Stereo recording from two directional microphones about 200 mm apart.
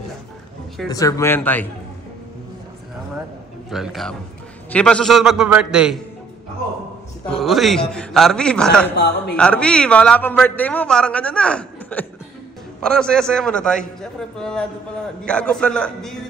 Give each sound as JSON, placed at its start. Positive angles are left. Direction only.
{"t": 0.8, "sound": "speech", "side_deg": 15}
{"t": 3.7, "sound": "a man's voice", "side_deg": 0}
{"t": 7.2, "sound": "a man's voice", "side_deg": 0}
{"t": 8.9, "sound": "a man's voice", "side_deg": 55}
{"t": 9.4, "sound": "a man's voice", "side_deg": 5}